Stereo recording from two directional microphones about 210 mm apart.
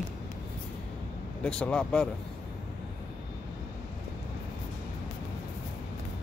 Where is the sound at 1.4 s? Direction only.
5° left (ahead or behind).